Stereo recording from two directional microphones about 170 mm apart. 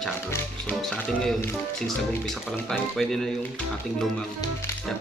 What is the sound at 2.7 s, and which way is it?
Speech, centre (ahead or behind).